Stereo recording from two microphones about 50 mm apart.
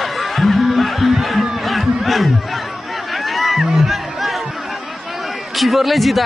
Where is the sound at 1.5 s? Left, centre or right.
Centre.